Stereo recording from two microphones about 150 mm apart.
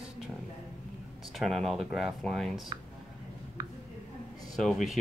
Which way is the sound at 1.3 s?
Centre (ahead or behind).